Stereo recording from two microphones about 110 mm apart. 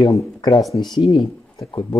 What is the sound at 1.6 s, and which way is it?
Speech, 35° left (ahead or behind).